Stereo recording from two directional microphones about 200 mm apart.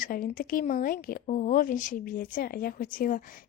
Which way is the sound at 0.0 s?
45° left (ahead or behind).